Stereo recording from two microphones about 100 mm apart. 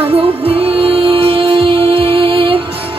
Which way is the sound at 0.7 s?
65° right (ahead or behind).